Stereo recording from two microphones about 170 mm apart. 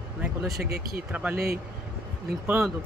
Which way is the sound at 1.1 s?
10° right (ahead or behind).